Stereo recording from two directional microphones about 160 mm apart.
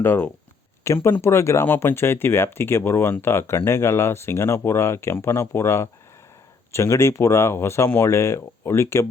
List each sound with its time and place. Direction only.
0.0 s speech: 15° left (ahead or behind)